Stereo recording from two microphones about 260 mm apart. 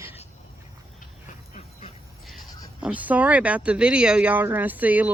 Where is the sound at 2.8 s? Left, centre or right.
Centre.